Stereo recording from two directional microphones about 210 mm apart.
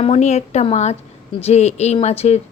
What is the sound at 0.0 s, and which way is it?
A woman's voice, 30° left (ahead or behind).